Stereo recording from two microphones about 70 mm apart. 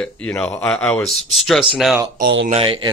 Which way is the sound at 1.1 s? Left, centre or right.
Centre.